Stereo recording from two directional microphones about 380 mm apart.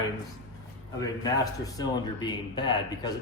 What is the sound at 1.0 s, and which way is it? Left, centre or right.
Speech, centre.